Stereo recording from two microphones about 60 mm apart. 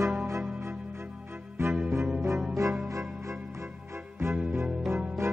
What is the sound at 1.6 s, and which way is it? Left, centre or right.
Music, right.